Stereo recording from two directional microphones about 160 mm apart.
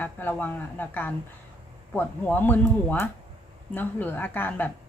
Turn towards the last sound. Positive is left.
turn(degrees=10)  # may be behind; listen again after turning